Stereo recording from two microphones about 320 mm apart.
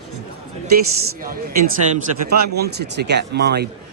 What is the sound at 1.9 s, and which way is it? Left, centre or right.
Speech, right.